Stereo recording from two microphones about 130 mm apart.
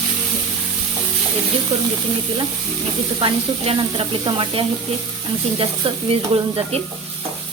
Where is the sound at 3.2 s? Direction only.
40° right (ahead or behind).